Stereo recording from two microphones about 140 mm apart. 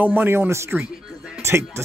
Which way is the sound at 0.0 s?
15° right (ahead or behind).